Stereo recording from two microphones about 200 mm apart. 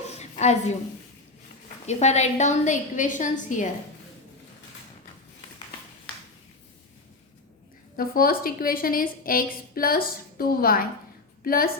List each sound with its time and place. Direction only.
0.1 s a sound: 35° left (ahead or behind)
1.9 s a woman's voice: 35° left (ahead or behind)
7.9 s a woman's voice: 45° left (ahead or behind)